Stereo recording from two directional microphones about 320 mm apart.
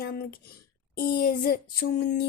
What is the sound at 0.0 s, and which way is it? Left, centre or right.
Speech, left.